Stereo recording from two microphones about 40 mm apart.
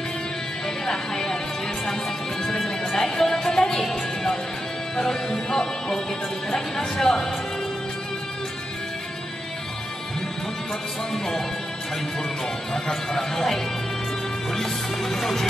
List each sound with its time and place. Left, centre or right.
0.8 s music: centre
2.4 s music: centre
6.5 s speech: centre
7.1 s music: centre
12.7 s music: centre